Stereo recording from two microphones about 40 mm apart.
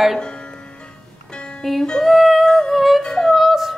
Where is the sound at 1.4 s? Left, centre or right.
Left.